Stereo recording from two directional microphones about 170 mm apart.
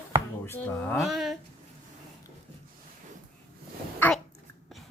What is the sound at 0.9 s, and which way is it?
Speech, centre (ahead or behind).